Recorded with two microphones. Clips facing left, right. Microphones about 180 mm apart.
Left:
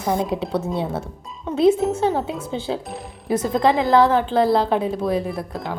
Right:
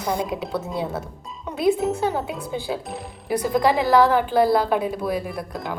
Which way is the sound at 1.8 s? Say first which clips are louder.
Left 2 dB; centre (ahead or behind).